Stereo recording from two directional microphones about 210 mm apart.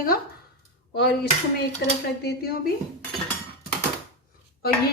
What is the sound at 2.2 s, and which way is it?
Speech, 50° left (ahead or behind).